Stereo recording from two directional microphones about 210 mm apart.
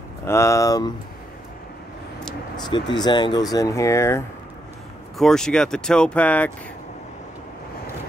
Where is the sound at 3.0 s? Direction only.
20° left (ahead or behind).